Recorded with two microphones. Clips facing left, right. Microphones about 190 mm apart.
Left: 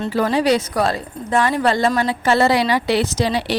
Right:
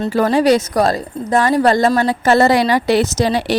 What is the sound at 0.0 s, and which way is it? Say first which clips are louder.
Speech: right 4 dB; 45° right (ahead or behind).